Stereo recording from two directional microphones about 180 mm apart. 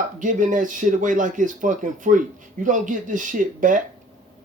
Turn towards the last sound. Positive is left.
turn(degrees=-45)  # may be behind; listen again after turning